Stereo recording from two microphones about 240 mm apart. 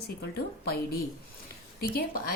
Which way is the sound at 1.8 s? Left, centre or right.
Left.